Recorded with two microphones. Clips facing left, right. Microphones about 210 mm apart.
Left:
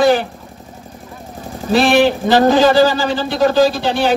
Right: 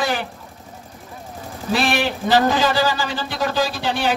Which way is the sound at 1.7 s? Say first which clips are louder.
Left 9 dB; 45° left (ahead or behind).